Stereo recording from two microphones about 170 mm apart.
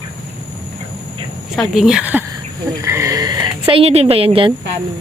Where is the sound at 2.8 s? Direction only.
20° right (ahead or behind).